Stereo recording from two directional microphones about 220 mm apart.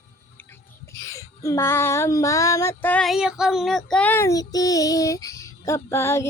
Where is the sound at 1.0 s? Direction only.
15° left (ahead or behind).